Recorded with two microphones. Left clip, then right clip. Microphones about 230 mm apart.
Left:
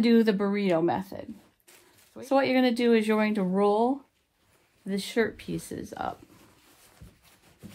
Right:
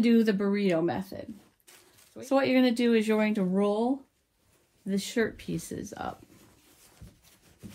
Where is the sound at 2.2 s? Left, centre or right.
Left.